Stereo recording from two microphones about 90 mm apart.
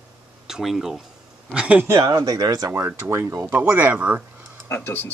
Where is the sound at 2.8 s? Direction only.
25° right (ahead or behind).